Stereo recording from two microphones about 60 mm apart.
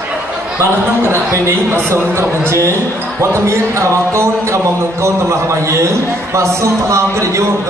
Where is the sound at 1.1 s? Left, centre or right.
Right.